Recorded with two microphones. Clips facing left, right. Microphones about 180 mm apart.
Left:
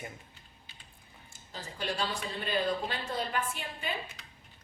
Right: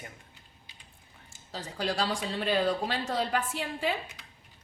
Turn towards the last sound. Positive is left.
turn(degrees=-90)